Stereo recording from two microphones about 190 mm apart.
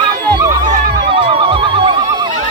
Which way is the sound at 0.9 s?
25° right (ahead or behind).